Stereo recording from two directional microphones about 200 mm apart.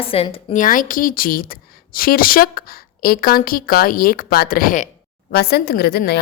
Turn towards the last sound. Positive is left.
turn(degrees=55)  # may be behind; listen again after turning